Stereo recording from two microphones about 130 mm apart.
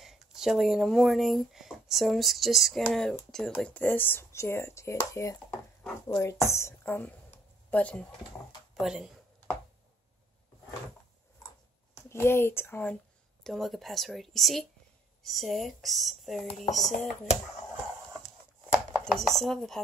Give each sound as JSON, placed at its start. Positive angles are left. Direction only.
{"t": 0.0, "sound": "a woman's voice", "side_deg": 0}
{"t": 8.7, "sound": "speech", "side_deg": -5}
{"t": 11.9, "sound": "speech", "side_deg": 20}
{"t": 13.4, "sound": "a woman's voice", "side_deg": 0}
{"t": 18.7, "sound": "chopping", "side_deg": 0}